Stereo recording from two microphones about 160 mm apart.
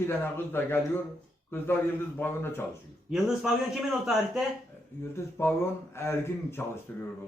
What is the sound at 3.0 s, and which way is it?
Speech, 5° right (ahead or behind).